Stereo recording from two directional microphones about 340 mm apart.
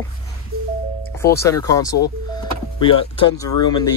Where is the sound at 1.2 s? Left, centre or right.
Centre.